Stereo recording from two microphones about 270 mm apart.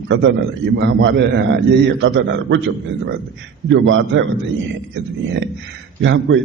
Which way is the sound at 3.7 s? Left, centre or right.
Right.